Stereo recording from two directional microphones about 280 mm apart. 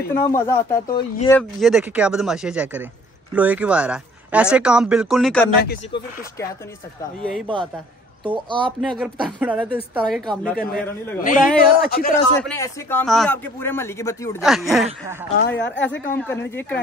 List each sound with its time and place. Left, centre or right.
0.1 s a man's voice: centre
1.6 s speech: centre
7.0 s speech: centre
8.5 s speech: centre
8.8 s speech: centre
10.5 s a woman's voice: left
12.4 s a man's voice: centre
14.4 s speech: centre
15.4 s a woman's voice: left
15.8 s a man's voice: centre